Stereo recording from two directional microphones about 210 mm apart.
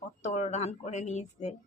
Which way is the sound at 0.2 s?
30° left (ahead or behind).